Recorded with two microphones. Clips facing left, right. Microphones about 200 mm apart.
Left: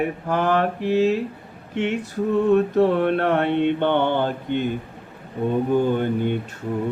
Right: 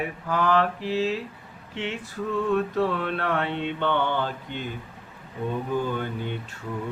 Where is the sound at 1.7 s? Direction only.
40° left (ahead or behind).